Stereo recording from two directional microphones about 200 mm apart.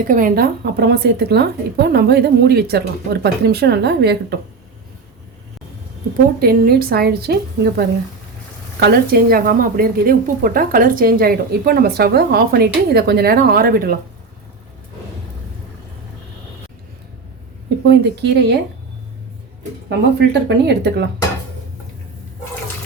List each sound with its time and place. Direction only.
0.0 s a woman's voice: 45° right (ahead or behind)
6.4 s a woman's voice: 50° right (ahead or behind)
17.8 s speech: 55° right (ahead or behind)
19.9 s speech: 55° right (ahead or behind)